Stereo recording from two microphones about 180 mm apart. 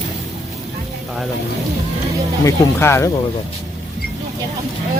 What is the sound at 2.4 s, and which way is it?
Speech, 15° left (ahead or behind).